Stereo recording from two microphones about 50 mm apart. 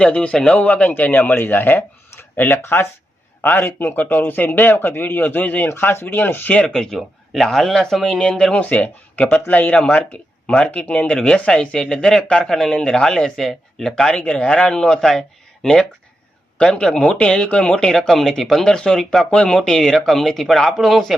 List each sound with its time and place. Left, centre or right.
0.0 s speech: left
1.5 s speech: left
5.6 s speech: left
6.5 s speech: left
6.7 s speech: centre
8.7 s speech: left
14.1 s speech: left; by 19.3 s centre
19.3 s speech: centre